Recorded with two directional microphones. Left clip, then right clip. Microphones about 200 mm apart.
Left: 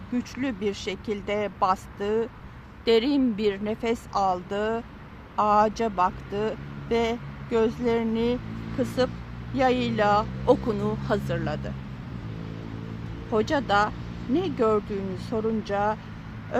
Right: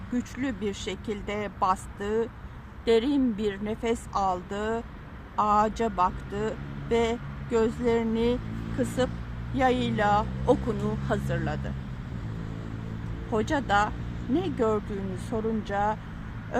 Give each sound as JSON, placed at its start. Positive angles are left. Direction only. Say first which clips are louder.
{"t": 0.3, "sound": "speech", "louder": "left 5 dB", "side_deg": 15}
{"t": 9.6, "sound": "speech", "louder": "left 2 dB", "side_deg": 15}
{"t": 13.3, "sound": "speech", "louder": "left 2 dB", "side_deg": 15}